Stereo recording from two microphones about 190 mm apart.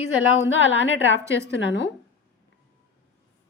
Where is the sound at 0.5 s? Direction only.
80° left.